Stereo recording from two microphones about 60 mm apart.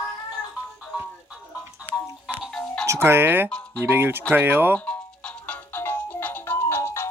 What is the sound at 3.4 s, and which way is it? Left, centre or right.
Music, left.